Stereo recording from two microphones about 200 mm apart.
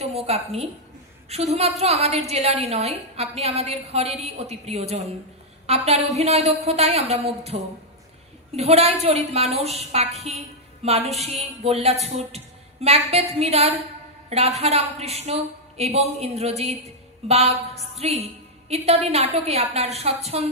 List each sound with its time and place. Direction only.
0.0 s a woman's voice: 30° right (ahead or behind)